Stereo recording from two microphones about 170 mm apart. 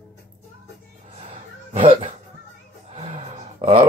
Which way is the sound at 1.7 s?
30° right (ahead or behind).